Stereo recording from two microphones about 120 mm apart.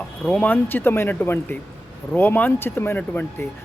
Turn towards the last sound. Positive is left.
turn(degrees=15)  # may be behind; listen again after turning